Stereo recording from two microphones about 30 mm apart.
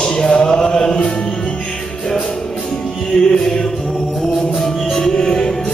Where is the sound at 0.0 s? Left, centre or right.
Left.